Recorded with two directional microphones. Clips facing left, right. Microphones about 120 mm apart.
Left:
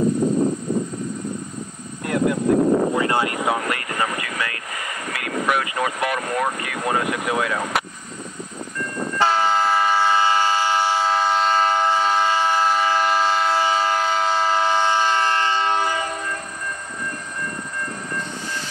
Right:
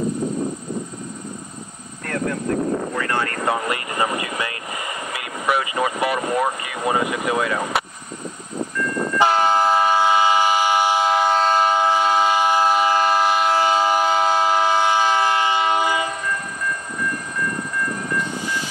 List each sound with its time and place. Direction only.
2.0 s speech: 10° left (ahead or behind)
3.4 s speech: 5° right (ahead or behind)
9.2 s train: 15° right (ahead or behind)